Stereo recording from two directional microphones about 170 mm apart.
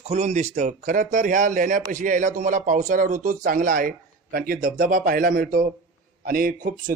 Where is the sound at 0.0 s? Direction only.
40° right (ahead or behind).